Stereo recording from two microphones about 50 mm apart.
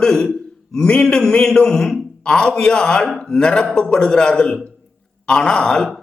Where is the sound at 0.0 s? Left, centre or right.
Centre.